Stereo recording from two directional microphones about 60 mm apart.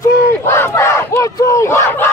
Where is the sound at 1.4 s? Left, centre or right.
Left.